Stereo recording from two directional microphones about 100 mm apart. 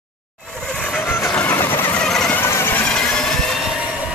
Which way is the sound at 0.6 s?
10° left (ahead or behind).